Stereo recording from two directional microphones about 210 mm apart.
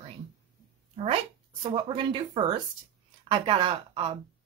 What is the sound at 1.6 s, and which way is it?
Speech, 25° right (ahead or behind).